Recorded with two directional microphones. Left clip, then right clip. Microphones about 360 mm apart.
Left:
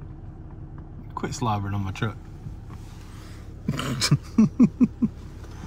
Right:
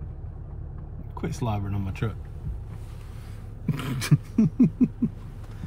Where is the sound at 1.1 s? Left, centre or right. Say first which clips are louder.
Left 5 dB; centre.